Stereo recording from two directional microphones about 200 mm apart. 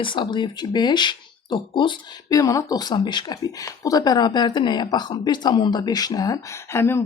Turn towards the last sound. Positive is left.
turn(degrees=10)  # may be behind; listen again after turning